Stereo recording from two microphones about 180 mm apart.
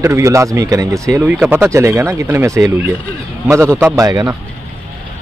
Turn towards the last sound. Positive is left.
turn(degrees=-20)  # may be behind; listen again after turning